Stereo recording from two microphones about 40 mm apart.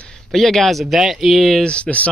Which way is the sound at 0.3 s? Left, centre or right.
Centre.